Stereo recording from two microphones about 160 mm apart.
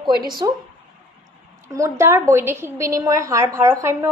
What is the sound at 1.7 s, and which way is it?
A woman's voice, 20° right (ahead or behind).